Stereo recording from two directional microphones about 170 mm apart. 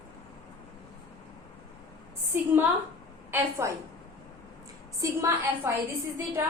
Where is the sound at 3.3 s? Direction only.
15° right (ahead or behind).